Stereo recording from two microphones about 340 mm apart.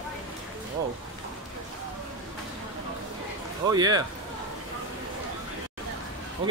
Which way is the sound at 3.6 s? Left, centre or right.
Centre.